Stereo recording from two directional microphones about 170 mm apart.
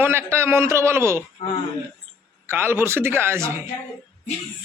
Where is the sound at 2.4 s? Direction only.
15° right (ahead or behind).